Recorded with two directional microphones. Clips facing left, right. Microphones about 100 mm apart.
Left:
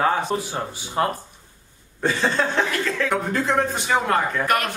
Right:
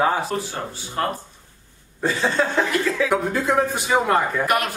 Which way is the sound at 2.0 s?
Centre (ahead or behind).